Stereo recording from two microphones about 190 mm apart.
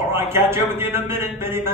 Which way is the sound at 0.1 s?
15° right (ahead or behind).